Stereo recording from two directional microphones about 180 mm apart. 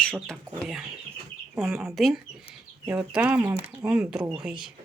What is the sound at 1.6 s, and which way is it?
Speech, centre (ahead or behind).